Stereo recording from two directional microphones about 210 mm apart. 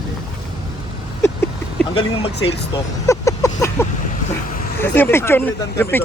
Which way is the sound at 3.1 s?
15° left (ahead or behind).